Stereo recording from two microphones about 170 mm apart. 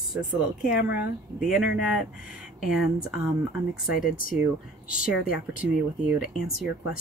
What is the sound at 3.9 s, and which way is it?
Speech, 55° left (ahead or behind).